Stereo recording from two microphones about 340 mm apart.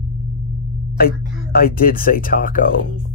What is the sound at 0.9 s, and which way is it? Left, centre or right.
Speech, left.